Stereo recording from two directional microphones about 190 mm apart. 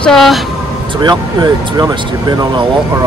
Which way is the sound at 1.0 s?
20° right (ahead or behind).